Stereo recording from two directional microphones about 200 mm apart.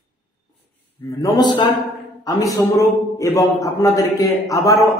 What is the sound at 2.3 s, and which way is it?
A man's voice, 15° left (ahead or behind).